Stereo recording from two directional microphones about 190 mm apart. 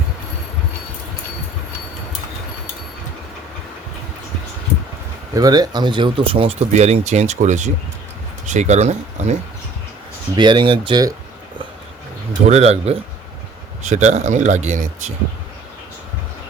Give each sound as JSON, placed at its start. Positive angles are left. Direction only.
{"t": 5.3, "sound": "speech", "side_deg": -20}
{"t": 10.3, "sound": "speech", "side_deg": -25}
{"t": 12.5, "sound": "speech", "side_deg": -35}